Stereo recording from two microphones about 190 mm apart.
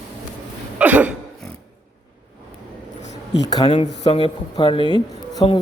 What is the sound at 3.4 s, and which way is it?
Speech, 20° left (ahead or behind).